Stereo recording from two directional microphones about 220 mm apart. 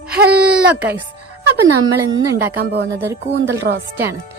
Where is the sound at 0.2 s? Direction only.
50° right (ahead or behind).